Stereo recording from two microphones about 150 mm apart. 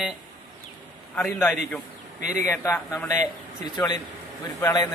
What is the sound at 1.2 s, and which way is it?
Speech, 15° left (ahead or behind).